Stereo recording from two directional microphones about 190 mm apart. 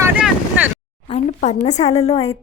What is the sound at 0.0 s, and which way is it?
Vehicle, 10° right (ahead or behind).